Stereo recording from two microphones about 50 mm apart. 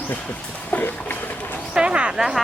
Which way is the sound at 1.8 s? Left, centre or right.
Right.